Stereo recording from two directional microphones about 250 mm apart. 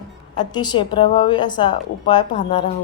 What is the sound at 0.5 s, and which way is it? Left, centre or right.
A woman's voice, centre.